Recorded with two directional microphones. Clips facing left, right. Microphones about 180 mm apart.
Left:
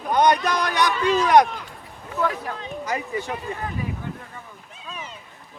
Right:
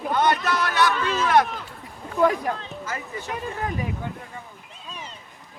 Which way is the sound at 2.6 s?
15° left (ahead or behind).